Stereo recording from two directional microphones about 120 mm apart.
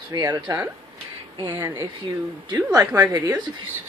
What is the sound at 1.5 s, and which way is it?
Female singing, 25° right (ahead or behind).